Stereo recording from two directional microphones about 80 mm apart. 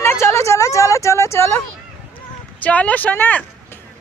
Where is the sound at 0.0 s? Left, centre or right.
Left.